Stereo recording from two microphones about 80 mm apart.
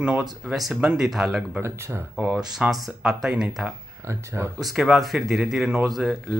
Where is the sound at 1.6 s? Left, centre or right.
Right.